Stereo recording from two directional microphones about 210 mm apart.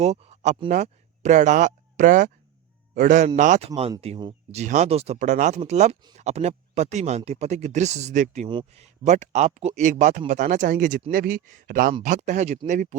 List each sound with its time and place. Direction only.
0.0 s speech: 30° right (ahead or behind)